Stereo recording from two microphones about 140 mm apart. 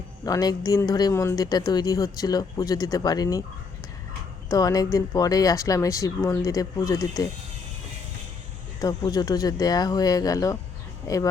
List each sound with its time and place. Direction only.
0.3 s speech: 25° left (ahead or behind)
4.4 s speech: 25° left (ahead or behind)
8.8 s speech: 25° left (ahead or behind)